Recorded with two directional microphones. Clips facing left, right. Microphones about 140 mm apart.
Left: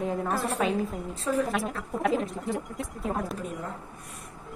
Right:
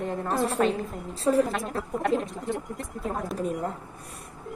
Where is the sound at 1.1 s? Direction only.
35° right (ahead or behind).